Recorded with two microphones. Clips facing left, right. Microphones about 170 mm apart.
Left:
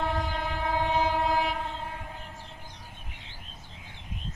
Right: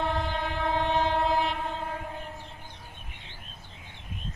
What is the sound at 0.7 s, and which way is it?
Train, 5° left (ahead or behind).